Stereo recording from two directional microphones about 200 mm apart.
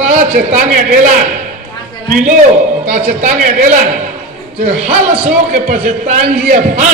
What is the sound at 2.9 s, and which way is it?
A woman's voice, 45° right (ahead or behind).